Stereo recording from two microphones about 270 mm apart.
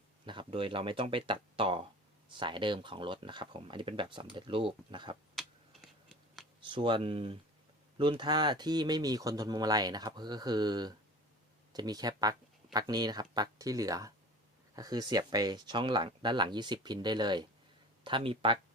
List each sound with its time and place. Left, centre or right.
0.3 s speech: centre
5.3 s a sound: centre
6.6 s speech: centre